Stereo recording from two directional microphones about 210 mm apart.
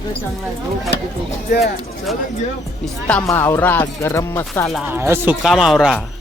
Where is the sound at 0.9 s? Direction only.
60° right (ahead or behind).